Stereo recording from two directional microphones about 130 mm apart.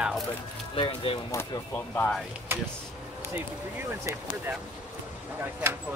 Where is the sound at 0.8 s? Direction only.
45° left (ahead or behind).